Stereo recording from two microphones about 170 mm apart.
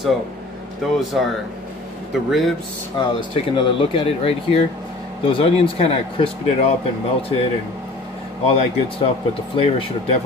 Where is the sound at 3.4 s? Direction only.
35° left (ahead or behind).